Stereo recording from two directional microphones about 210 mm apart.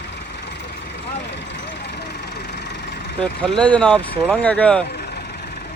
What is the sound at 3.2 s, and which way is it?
Speech, 5° left (ahead or behind).